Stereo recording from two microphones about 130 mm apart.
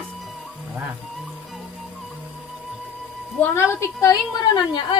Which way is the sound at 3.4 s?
20° left (ahead or behind).